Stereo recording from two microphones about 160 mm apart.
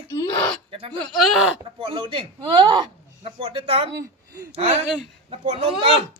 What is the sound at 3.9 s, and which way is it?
Speech, 15° right (ahead or behind).